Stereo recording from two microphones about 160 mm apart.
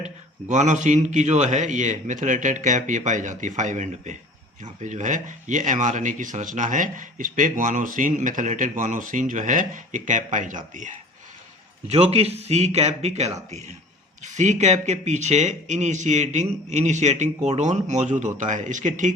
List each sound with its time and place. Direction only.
0.0 s speech: 50° right (ahead or behind)
11.9 s speech: 40° right (ahead or behind)